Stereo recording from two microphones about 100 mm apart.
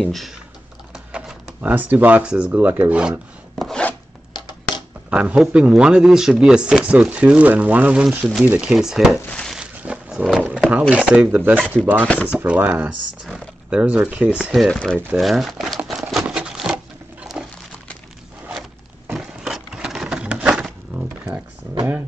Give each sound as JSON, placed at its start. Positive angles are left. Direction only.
{"t": 0.0, "sound": "speech", "side_deg": 0}
{"t": 0.9, "sound": "speech", "side_deg": -10}
{"t": 3.5, "sound": "chopping", "side_deg": 0}
{"t": 5.1, "sound": "speech", "side_deg": -10}
{"t": 9.3, "sound": "a sound", "side_deg": 10}
{"t": 9.6, "sound": "wild animals", "side_deg": -10}
{"t": 10.7, "sound": "speech", "side_deg": -15}
{"t": 12.1, "sound": "speech", "side_deg": 10}
{"t": 12.4, "sound": "speech", "side_deg": -15}
{"t": 15.9, "sound": "a sound", "side_deg": 0}
{"t": 19.1, "sound": "sewing machine", "side_deg": -5}